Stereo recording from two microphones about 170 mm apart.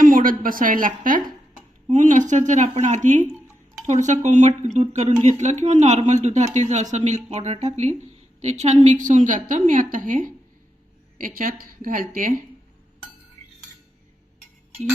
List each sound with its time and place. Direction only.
0.0 s a woman's voice: 55° right (ahead or behind)